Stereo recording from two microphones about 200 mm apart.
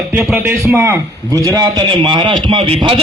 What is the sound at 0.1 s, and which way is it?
A man's voice, 5° right (ahead or behind).